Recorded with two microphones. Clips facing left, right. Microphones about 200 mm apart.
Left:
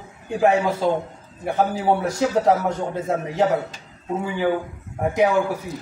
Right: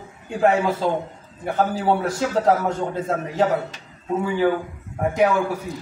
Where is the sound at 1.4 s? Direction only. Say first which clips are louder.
Even; 15° left (ahead or behind).